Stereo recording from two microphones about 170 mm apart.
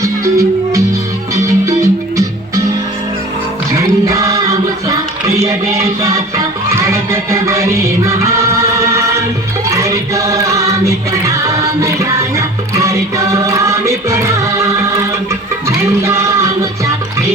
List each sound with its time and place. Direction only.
0.0 s music: 20° right (ahead or behind)
3.7 s music: 20° right (ahead or behind)
16.0 s music: 15° right (ahead or behind)